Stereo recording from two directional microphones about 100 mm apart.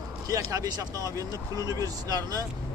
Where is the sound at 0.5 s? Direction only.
35° right (ahead or behind).